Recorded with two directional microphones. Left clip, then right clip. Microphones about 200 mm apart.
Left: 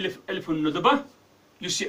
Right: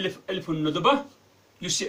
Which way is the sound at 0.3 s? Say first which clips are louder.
Left 3 dB; 15° left (ahead or behind).